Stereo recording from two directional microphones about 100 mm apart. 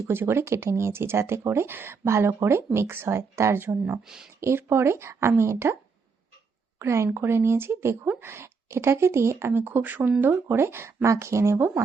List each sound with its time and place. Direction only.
0.1 s speech: 25° right (ahead or behind)
4.0 s speech: 5° right (ahead or behind)
4.4 s speech: 25° right (ahead or behind)
6.7 s speech: 30° right (ahead or behind)